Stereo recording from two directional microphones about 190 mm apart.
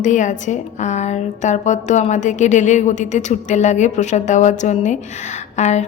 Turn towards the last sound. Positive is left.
turn(degrees=35)  # may be behind; listen again after turning